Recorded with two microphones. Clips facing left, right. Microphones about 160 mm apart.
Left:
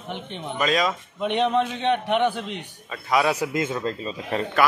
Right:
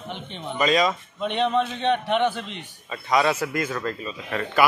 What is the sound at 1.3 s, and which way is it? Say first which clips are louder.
A man's voice: left 1 dB; 15° left (ahead or behind).